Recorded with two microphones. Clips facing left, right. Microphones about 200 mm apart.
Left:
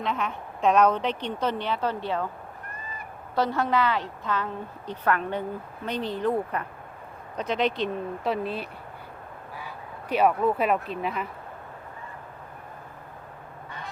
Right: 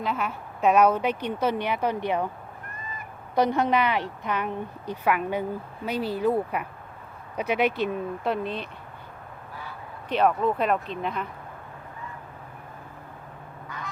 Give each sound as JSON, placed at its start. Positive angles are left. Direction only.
{"t": 0.0, "sound": "a woman's voice", "side_deg": -5}
{"t": 3.3, "sound": "a woman's voice", "side_deg": -20}
{"t": 10.1, "sound": "speech", "side_deg": 10}
{"t": 13.7, "sound": "goose", "side_deg": 30}